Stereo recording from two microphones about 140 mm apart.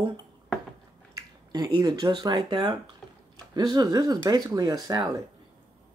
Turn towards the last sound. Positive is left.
turn(degrees=-25)  # may be behind; listen again after turning